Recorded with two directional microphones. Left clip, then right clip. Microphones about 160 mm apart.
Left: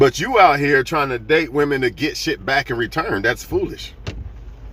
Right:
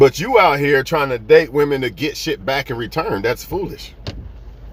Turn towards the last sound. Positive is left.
turn(degrees=-20)  # may be behind; listen again after turning